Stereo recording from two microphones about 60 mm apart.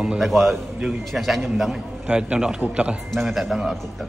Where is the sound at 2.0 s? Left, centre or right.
Centre.